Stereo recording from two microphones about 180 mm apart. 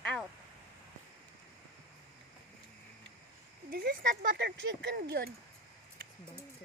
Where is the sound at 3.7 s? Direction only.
55° right (ahead or behind).